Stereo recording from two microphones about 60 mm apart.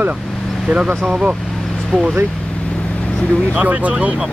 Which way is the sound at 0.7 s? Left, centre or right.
Centre.